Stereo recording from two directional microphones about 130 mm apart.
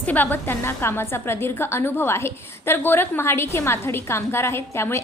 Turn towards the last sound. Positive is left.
turn(degrees=20)  # may be behind; listen again after turning